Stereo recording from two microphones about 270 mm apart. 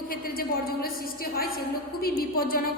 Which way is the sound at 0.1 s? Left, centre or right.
Left.